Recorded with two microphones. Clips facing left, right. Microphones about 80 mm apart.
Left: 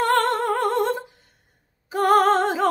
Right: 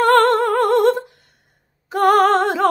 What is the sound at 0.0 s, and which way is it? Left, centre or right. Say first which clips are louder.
Music: right 7 dB; right.